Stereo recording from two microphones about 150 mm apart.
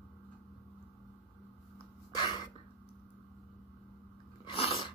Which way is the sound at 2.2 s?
30° left (ahead or behind).